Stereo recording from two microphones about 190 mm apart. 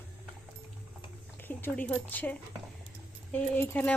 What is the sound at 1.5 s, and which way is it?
Speech, 10° left (ahead or behind).